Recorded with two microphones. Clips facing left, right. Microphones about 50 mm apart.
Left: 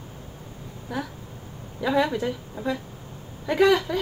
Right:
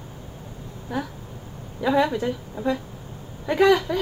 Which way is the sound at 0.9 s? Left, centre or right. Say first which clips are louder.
Right 2 dB; centre.